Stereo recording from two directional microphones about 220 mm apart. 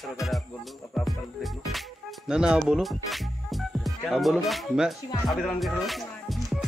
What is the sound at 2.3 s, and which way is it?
Speech, 5° right (ahead or behind).